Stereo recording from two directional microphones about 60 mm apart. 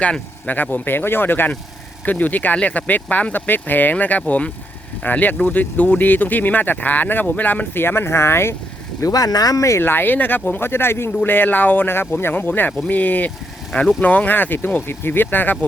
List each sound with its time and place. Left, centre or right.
0.0 s speech: left
9.0 s speech: left
9.8 s speech: left
11.2 s speech: left